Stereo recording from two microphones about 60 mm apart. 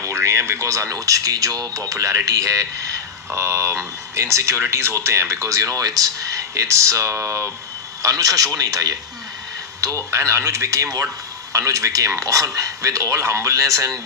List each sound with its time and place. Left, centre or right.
0.0 s speech: right
8.0 s speech: right
10.1 s speech: right